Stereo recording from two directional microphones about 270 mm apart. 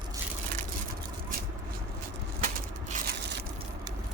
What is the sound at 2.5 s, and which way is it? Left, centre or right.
Crushing, right.